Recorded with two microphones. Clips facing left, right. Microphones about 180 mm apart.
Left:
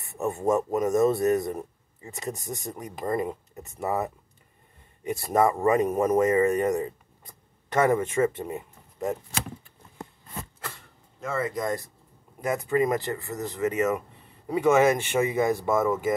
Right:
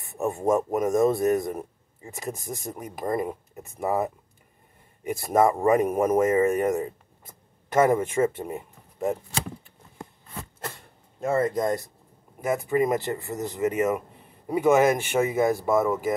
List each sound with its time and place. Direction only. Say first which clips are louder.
0.2 s speech: right 1 dB; 10° right (ahead or behind)
2.1 s speech: even; centre (ahead or behind)
5.3 s speech: right 2 dB; 15° right (ahead or behind)
11.1 s speech: right 6 dB; 50° right (ahead or behind)
12.4 s speech: right 2 dB; 5° right (ahead or behind)
12.8 s speech: right 1 dB; 20° right (ahead or behind)